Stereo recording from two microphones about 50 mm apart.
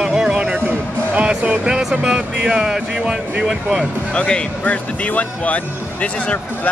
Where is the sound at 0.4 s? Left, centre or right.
Right.